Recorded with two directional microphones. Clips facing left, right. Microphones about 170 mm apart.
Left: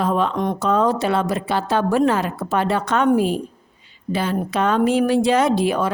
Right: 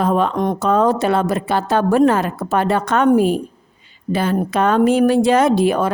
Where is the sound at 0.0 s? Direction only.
50° right (ahead or behind).